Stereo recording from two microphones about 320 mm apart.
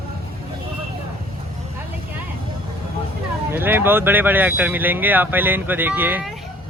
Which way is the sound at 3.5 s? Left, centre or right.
Centre.